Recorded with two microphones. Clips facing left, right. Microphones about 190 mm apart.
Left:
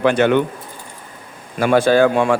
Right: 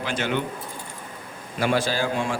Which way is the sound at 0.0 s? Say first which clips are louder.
Left 12 dB; 60° left (ahead or behind).